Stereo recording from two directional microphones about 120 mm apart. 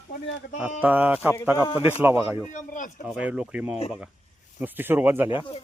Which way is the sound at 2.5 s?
90° left.